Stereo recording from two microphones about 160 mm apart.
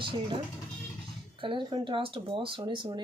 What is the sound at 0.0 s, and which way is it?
Speech, 30° right (ahead or behind).